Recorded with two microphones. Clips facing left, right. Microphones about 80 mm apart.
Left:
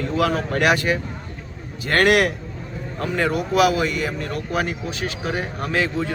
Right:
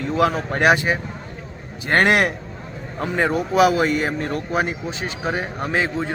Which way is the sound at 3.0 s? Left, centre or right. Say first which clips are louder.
Right 1 dB; centre.